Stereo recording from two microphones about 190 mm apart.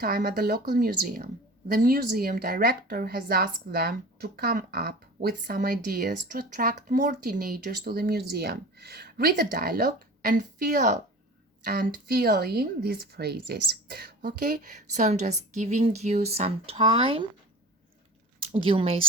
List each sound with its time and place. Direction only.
0.0 s speech: 50° right (ahead or behind)
11.6 s speech: 55° right (ahead or behind); by 17.2 s 30° right (ahead or behind)
18.5 s speech: 30° right (ahead or behind)